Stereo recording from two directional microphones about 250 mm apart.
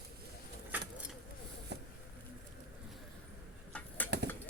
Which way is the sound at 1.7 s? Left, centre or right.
Right.